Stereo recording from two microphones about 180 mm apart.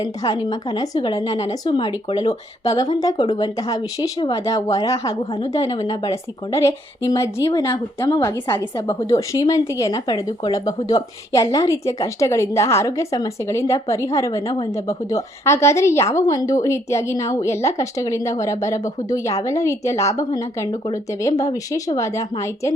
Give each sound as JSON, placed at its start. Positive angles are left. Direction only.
{"t": 0.0, "sound": "a woman's voice", "side_deg": 20}